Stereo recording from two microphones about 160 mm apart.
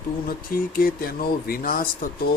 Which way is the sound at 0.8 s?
65° left (ahead or behind).